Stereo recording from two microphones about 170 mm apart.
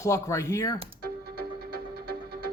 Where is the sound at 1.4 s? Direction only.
70° right (ahead or behind).